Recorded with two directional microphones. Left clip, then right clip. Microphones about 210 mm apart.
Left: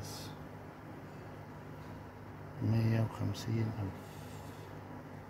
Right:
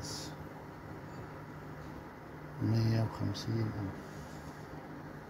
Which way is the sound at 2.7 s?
5° left (ahead or behind).